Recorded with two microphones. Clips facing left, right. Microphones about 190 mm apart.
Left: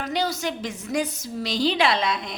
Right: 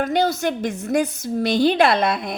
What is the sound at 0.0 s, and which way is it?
Speech, 55° right (ahead or behind).